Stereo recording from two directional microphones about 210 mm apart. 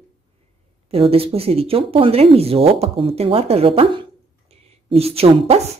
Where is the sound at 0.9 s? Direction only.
25° right (ahead or behind).